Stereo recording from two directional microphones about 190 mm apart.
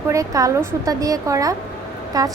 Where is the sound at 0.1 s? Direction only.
15° right (ahead or behind).